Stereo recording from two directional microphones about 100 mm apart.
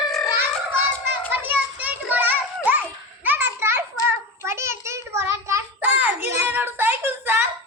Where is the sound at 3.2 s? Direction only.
20° right (ahead or behind).